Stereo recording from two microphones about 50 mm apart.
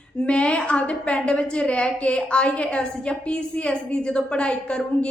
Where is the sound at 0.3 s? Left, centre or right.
Left.